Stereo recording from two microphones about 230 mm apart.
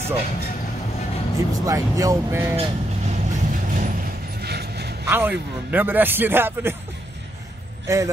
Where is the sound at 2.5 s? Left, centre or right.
Right.